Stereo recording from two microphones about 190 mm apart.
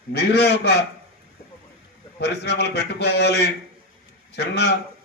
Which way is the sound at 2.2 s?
60° left (ahead or behind).